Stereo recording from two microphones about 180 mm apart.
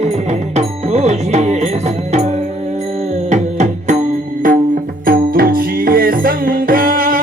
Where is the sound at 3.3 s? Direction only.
40° right (ahead or behind).